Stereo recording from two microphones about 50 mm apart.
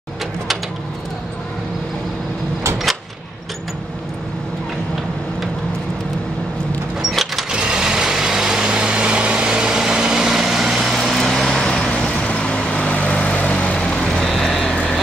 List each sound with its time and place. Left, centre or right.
7.0 s vehicle: centre
7.5 s vehicle: centre
11.6 s vehicle: centre
14.3 s vehicle: centre